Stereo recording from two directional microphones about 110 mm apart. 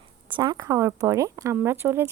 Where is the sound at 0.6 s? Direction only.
25° right (ahead or behind).